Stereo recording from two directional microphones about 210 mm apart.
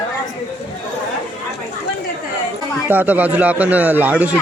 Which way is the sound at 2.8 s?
10° right (ahead or behind).